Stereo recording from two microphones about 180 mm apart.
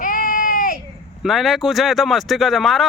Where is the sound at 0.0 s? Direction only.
50° left (ahead or behind).